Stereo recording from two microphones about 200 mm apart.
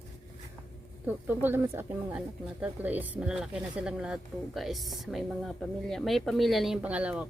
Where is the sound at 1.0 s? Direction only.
10° right (ahead or behind).